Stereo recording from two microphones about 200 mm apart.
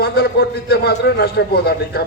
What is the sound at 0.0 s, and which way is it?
A man's voice, 50° left (ahead or behind).